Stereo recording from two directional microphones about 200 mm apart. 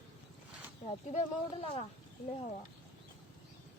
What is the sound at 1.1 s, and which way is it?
Speech, 30° left (ahead or behind).